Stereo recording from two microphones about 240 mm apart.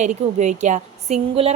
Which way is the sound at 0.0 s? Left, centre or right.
Right.